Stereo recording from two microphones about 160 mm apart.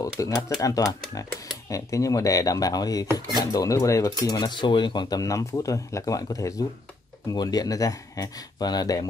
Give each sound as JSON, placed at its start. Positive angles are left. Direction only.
{"t": 0.0, "sound": "speech", "side_deg": 20}